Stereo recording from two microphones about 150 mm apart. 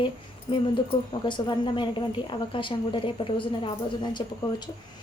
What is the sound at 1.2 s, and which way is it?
A woman's voice, 30° left (ahead or behind).